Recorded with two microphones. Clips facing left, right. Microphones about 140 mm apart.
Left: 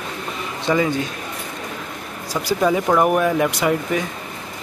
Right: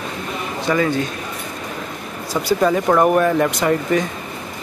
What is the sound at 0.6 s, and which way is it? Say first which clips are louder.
Speech: even; 15° left (ahead or behind).